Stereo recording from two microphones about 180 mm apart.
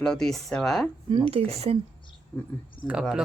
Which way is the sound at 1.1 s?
30° right (ahead or behind).